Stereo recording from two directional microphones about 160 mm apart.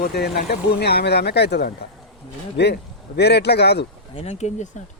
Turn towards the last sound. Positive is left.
turn(degrees=45)  # may be behind; listen again after turning